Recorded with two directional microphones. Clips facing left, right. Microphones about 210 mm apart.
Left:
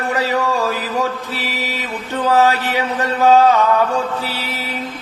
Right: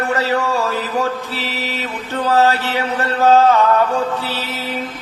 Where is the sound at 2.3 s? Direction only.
15° left (ahead or behind).